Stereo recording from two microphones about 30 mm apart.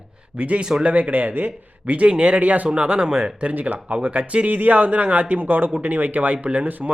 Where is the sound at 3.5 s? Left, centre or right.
Right.